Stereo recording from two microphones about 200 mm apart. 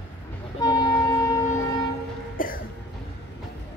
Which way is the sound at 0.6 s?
20° left (ahead or behind).